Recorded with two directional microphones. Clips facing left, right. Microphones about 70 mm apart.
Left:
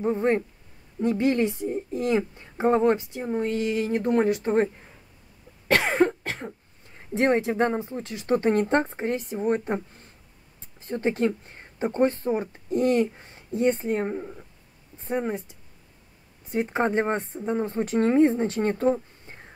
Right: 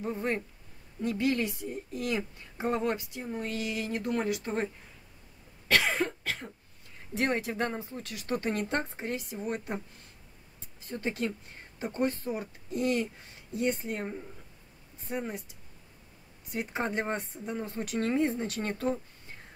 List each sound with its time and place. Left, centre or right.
0.0 s a woman's voice: left
5.7 s cough: left
7.2 s a woman's voice: left
10.8 s speech: left